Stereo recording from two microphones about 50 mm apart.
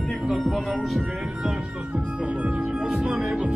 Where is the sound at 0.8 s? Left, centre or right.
Centre; by 3.5 s right.